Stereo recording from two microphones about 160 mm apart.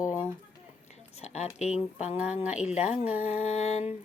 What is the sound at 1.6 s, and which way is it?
Speech, 45° left (ahead or behind).